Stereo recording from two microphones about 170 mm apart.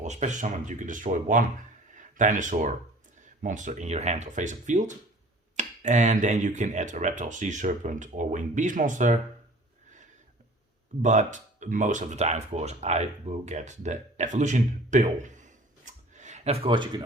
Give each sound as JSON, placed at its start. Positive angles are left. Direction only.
{"t": 0.0, "sound": "speech", "side_deg": -45}
{"t": 11.0, "sound": "speech", "side_deg": -45}